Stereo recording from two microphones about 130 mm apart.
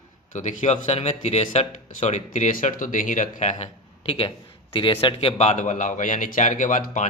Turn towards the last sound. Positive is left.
turn(degrees=75)  # may be behind; listen again after turning